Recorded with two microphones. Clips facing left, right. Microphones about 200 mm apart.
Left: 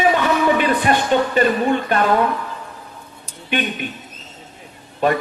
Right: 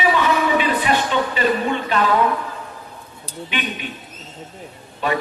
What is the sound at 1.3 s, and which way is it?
Speech, 50° left (ahead or behind).